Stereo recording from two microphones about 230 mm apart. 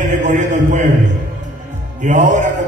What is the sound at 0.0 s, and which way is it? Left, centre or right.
Speech, right.